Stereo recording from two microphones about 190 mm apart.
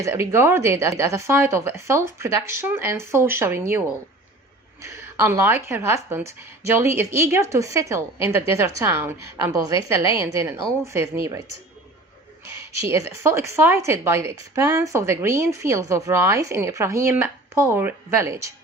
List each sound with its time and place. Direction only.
0.0 s a woman's voice: 15° right (ahead or behind)
12.5 s a woman's voice: 15° right (ahead or behind)